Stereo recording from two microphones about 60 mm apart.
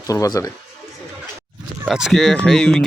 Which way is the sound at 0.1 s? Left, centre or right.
Left.